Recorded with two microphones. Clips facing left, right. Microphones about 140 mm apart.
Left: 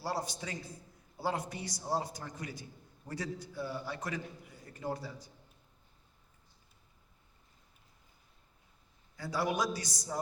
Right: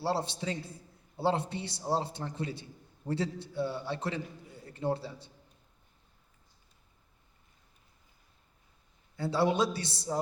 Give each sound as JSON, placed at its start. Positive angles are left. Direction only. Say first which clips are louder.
{"t": 0.0, "sound": "a man's voice", "louder": "right 5 dB", "side_deg": -25}
{"t": 9.1, "sound": "a man's voice", "louder": "right 5 dB", "side_deg": -25}